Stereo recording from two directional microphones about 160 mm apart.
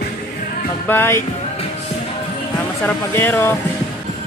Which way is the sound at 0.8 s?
15° left (ahead or behind).